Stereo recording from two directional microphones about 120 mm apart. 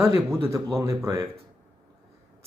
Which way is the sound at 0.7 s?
25° right (ahead or behind).